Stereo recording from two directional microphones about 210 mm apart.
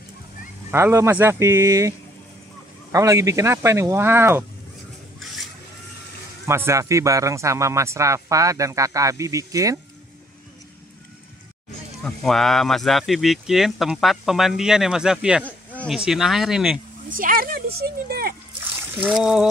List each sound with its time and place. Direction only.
0.7 s speech: 10° right (ahead or behind)
6.4 s speech: 10° right (ahead or behind)
12.0 s speech: centre (ahead or behind)
15.4 s a sound: 5° left (ahead or behind)
16.1 s speech: centre (ahead or behind)
17.1 s speech: 40° right (ahead or behind)
18.9 s speech: centre (ahead or behind)